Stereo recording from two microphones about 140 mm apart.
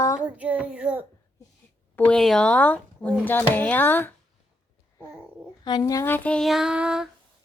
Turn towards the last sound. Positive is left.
turn(degrees=-5)  # may be behind; listen again after turning